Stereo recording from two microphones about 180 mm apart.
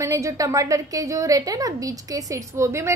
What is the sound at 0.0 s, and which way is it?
A woman's voice, 15° right (ahead or behind).